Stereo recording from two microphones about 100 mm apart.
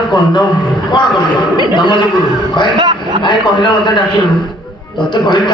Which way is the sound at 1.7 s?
50° left (ahead or behind).